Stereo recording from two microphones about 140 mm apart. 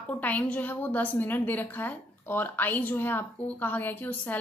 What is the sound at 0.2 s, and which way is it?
A woman's voice, 10° left (ahead or behind).